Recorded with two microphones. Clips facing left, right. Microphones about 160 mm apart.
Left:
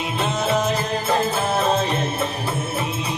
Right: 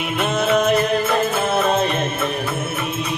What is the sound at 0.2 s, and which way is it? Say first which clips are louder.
Music: right 4 dB; 65° right (ahead or behind).